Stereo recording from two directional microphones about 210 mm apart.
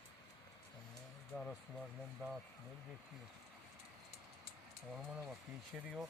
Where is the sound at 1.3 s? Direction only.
Centre (ahead or behind).